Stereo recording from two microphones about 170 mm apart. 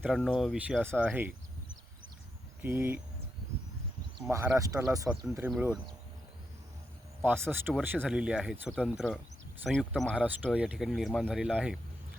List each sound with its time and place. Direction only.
0.1 s speech: centre (ahead or behind)
2.6 s speech: 10° right (ahead or behind)
4.3 s speech: 15° right (ahead or behind)
5.1 s speech: 5° right (ahead or behind)
7.2 s speech: 15° right (ahead or behind)